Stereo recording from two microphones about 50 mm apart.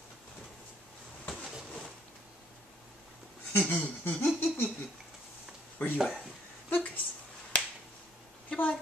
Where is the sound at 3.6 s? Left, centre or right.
Left.